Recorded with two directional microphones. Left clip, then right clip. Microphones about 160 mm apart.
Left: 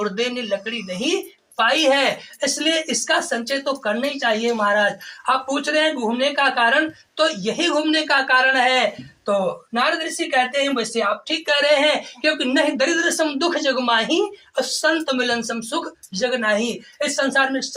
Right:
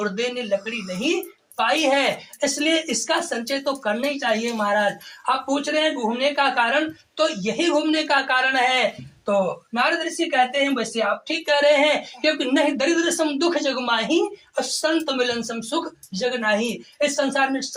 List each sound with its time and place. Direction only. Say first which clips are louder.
0.0 s speech: left 2 dB; 25° right (ahead or behind)